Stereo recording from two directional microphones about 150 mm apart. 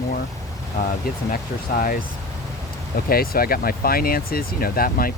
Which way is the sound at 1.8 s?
70° left (ahead or behind).